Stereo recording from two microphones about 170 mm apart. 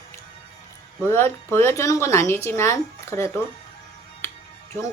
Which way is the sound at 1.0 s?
15° left (ahead or behind).